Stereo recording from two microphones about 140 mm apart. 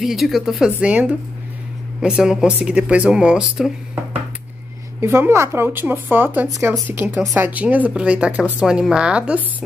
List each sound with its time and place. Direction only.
0.0 s speech: centre (ahead or behind)
5.0 s speech: 20° right (ahead or behind)